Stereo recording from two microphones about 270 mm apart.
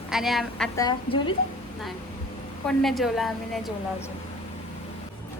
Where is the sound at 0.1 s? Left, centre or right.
Centre.